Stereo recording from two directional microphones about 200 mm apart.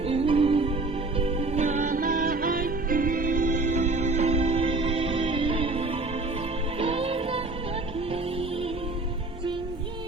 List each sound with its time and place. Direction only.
0.1 s music: 30° right (ahead or behind)